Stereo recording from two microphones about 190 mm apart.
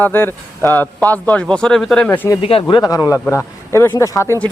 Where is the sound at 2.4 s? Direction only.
30° left (ahead or behind).